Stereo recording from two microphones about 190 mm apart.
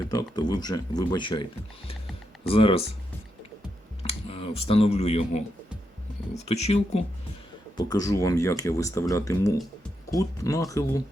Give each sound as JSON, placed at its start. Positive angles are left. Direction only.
{"t": 0.1, "sound": "speech", "side_deg": 20}
{"t": 4.0, "sound": "speech", "side_deg": 30}
{"t": 6.4, "sound": "speech", "side_deg": 35}
{"t": 7.8, "sound": "speech", "side_deg": 20}